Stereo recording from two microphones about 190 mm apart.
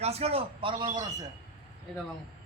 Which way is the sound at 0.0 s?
35° right (ahead or behind).